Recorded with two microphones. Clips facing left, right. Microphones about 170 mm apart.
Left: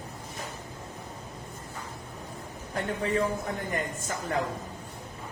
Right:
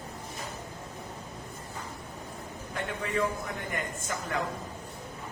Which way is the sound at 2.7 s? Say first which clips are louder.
Left 4 dB; 35° left (ahead or behind).